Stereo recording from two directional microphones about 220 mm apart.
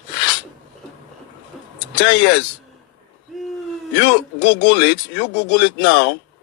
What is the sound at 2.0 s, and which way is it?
Speech, 50° left (ahead or behind).